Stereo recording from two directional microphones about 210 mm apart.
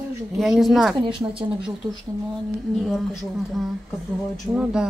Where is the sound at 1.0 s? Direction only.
25° right (ahead or behind).